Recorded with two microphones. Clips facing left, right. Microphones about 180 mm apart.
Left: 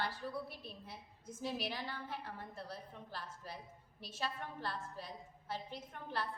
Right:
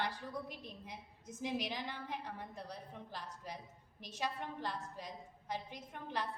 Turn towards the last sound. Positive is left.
turn(degrees=-15)  # may be behind; listen again after turning